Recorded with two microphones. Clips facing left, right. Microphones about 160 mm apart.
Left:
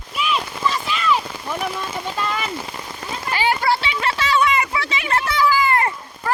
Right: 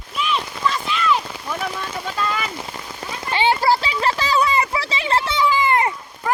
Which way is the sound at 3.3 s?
25° right (ahead or behind).